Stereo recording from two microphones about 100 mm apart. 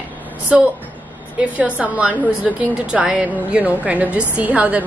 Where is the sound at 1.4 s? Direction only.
15° right (ahead or behind).